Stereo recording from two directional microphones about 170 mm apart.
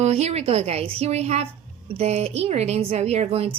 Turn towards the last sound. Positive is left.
turn(degrees=-35)  # may be behind; listen again after turning